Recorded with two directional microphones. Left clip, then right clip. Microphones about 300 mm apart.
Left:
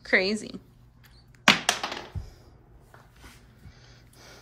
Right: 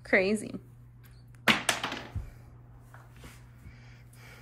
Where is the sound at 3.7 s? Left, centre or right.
Centre.